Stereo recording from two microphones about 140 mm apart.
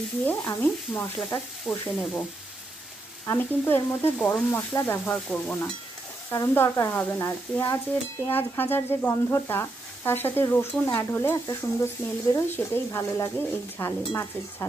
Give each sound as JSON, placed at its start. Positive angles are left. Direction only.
{"t": 0.2, "sound": "sizzle", "side_deg": 15}
{"t": 3.3, "sound": "sizzle", "side_deg": 15}
{"t": 4.2, "sound": "speech", "side_deg": 5}
{"t": 4.5, "sound": "sizzle", "side_deg": 15}
{"t": 6.3, "sound": "sizzle", "side_deg": 20}
{"t": 11.4, "sound": "speech", "side_deg": 20}
{"t": 13.7, "sound": "sizzle", "side_deg": 20}